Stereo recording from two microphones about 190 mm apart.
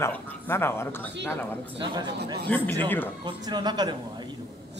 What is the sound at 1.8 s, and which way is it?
Speech, 25° right (ahead or behind).